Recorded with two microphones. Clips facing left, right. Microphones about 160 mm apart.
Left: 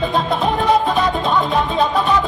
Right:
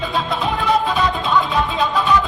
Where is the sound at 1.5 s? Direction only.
45° left (ahead or behind).